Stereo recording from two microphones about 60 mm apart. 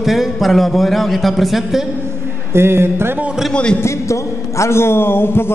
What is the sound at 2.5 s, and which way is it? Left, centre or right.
Speech, right.